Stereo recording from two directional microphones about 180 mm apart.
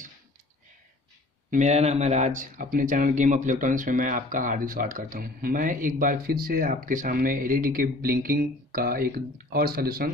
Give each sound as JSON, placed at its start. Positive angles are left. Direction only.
{"t": 1.5, "sound": "speech", "side_deg": -40}